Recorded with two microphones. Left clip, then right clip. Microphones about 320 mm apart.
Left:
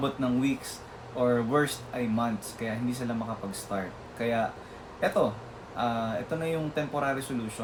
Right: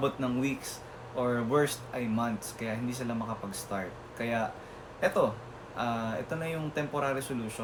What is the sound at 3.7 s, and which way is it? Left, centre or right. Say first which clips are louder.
Speech: left 2 dB; centre.